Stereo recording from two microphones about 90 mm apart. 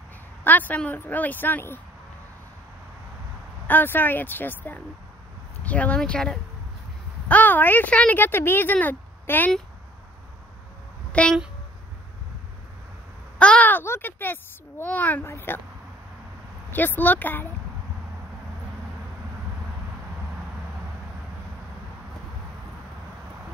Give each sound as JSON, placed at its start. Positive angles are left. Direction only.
{"t": 0.4, "sound": "speech", "side_deg": 20}
{"t": 3.6, "sound": "speech", "side_deg": 20}
{"t": 11.1, "sound": "a sound", "side_deg": 15}
{"t": 13.4, "sound": "speech", "side_deg": 15}
{"t": 16.7, "sound": "speech", "side_deg": 20}